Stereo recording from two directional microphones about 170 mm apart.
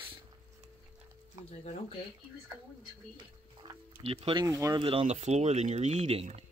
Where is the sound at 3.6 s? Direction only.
35° right (ahead or behind).